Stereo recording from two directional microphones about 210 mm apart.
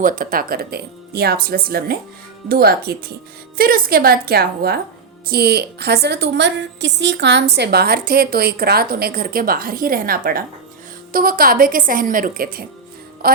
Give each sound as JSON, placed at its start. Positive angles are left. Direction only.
{"t": 0.0, "sound": "a woman's voice", "side_deg": -40}